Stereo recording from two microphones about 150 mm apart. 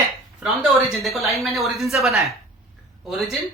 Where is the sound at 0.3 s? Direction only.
5° right (ahead or behind).